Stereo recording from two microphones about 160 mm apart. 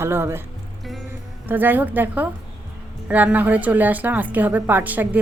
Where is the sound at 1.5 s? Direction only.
10° right (ahead or behind).